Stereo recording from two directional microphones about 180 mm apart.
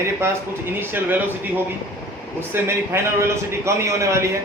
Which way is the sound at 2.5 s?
15° right (ahead or behind).